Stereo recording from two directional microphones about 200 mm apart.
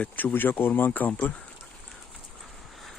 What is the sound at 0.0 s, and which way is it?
Speech, 10° left (ahead or behind).